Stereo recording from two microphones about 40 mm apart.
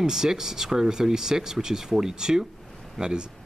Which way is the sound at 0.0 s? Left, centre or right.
Centre.